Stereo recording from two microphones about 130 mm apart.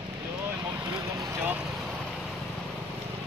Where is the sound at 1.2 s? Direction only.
20° right (ahead or behind).